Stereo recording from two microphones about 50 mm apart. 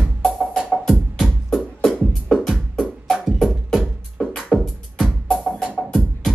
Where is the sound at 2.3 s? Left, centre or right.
Centre.